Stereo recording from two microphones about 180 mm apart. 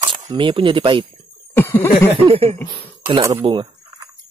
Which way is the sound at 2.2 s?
30° right (ahead or behind).